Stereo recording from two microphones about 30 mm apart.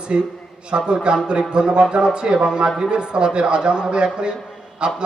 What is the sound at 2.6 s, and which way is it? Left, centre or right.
Speech, centre.